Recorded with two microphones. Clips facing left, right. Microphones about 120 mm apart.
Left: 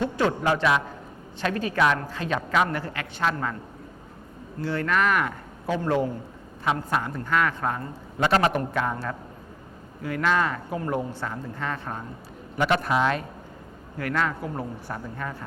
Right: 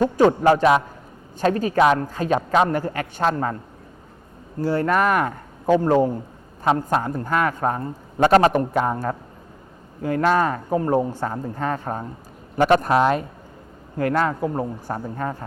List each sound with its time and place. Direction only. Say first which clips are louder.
0.0 s speech: right 8 dB; 40° right (ahead or behind)
4.6 s a man's voice: right 5 dB; 40° right (ahead or behind)
14.0 s speech: right 6 dB; 35° right (ahead or behind)